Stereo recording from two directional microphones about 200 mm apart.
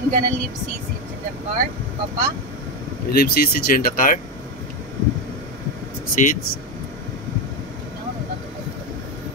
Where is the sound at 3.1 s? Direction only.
50° left (ahead or behind).